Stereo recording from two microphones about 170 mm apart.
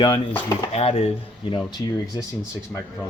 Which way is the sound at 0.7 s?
35° left (ahead or behind).